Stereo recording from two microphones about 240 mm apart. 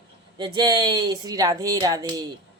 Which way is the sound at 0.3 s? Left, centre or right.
Centre.